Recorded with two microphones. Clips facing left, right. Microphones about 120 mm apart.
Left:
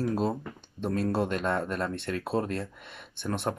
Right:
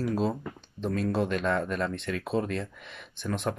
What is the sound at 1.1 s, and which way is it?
Speech, 50° left (ahead or behind).